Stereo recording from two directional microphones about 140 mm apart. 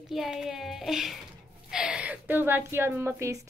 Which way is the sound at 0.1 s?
Centre (ahead or behind).